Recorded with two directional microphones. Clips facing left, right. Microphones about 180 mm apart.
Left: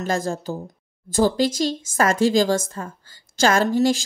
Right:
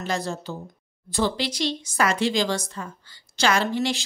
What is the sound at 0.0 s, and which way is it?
A woman's voice, 45° left (ahead or behind).